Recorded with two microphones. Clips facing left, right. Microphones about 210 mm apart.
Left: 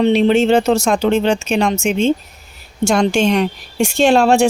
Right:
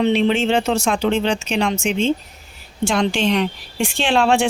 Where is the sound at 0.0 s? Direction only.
40° left (ahead or behind).